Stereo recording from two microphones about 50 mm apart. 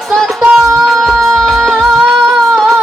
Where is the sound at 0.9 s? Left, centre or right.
Centre.